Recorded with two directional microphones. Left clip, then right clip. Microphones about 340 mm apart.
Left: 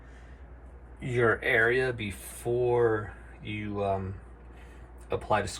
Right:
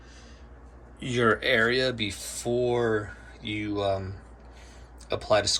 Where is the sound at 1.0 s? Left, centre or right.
Centre.